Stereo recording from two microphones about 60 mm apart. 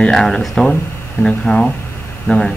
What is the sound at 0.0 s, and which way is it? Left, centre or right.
Speech, centre.